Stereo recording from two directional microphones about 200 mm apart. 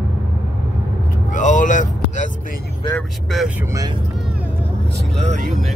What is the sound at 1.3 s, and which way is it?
Speech, 40° left (ahead or behind).